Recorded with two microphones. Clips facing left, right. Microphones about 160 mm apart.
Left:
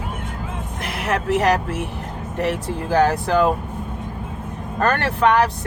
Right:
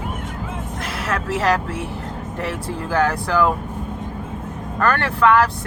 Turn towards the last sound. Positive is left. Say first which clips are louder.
# right 1 dB
turn(degrees=20)  # may be behind; listen again after turning